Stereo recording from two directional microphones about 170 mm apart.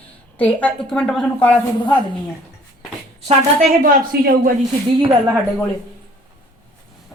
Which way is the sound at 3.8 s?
60° right (ahead or behind).